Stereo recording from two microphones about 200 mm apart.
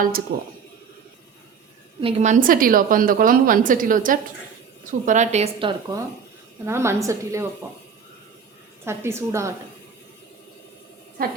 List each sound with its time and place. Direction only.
0.3 s a woman's voice: 55° right (ahead or behind)
2.0 s a woman's voice: 30° right (ahead or behind)
6.7 s a woman's voice: 15° right (ahead or behind)
8.8 s a woman's voice: 15° right (ahead or behind)